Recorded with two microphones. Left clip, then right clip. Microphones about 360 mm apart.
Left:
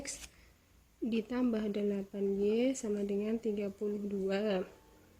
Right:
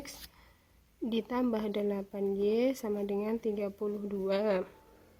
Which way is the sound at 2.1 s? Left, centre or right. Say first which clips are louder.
Right 2 dB; right.